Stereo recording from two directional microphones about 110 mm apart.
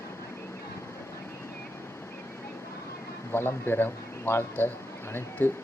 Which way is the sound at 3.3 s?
20° left (ahead or behind).